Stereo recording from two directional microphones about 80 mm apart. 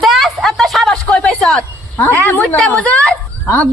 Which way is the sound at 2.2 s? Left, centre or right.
Left.